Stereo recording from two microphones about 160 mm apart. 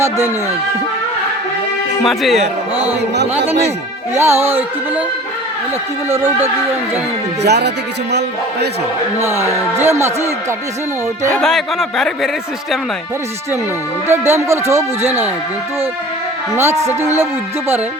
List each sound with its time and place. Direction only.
2.0 s a man's voice: centre (ahead or behind)
4.1 s music: 15° right (ahead or behind)
6.1 s music: 15° right (ahead or behind)
7.4 s speech: 90° right
9.7 s music: 15° right (ahead or behind)
11.3 s a man's voice: centre (ahead or behind)
14.1 s music: 15° right (ahead or behind)
16.6 s music: 15° right (ahead or behind)